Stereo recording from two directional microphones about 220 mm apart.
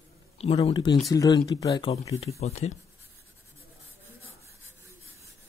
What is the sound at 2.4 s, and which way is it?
Speech, 30° left (ahead or behind).